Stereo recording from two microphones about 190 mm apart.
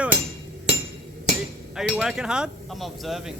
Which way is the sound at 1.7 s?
5° right (ahead or behind).